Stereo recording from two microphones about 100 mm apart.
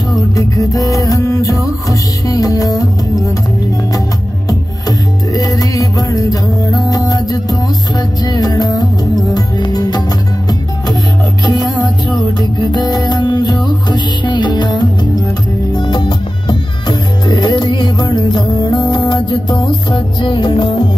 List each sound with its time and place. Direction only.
0.1 s music: 35° left (ahead or behind)
4.5 s music: 40° left (ahead or behind)
11.4 s music: 45° left (ahead or behind)